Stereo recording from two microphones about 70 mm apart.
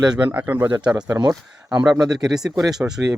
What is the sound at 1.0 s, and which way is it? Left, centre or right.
Speech, right.